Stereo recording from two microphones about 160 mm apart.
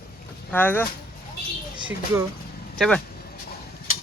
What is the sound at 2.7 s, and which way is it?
Speech, 5° left (ahead or behind).